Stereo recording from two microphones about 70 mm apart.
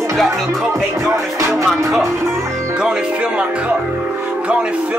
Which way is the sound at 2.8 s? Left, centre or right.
Centre.